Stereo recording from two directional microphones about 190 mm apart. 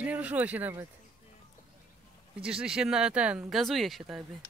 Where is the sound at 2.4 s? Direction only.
5° right (ahead or behind).